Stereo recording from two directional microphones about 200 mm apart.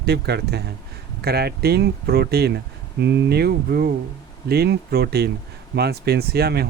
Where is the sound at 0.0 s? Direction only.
55° right (ahead or behind).